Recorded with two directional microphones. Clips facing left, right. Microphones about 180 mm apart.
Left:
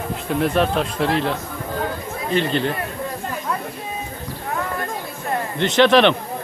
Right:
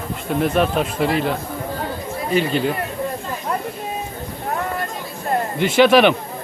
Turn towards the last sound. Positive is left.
turn(degrees=-5)  # may be behind; listen again after turning